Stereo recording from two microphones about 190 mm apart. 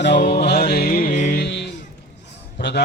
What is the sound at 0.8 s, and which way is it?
Music, 50° left (ahead or behind).